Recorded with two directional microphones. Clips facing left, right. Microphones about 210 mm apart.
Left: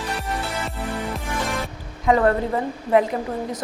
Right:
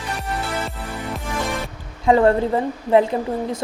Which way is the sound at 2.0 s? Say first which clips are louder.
Right 3 dB; 30° right (ahead or behind).